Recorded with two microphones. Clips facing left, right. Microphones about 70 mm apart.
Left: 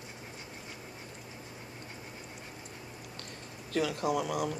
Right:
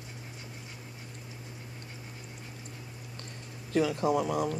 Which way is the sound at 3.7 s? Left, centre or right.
Right.